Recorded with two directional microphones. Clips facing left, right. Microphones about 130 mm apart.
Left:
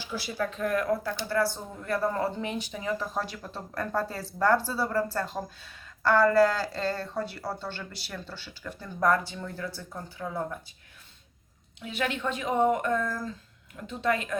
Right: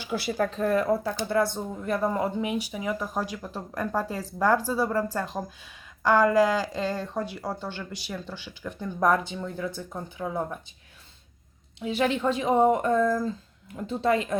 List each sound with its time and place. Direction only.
0.0 s speech: 55° right (ahead or behind)
0.5 s speech: 30° right (ahead or behind)
11.9 s speech: 30° right (ahead or behind)